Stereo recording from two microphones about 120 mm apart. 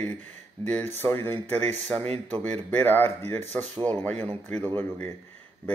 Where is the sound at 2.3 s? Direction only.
65° right (ahead or behind).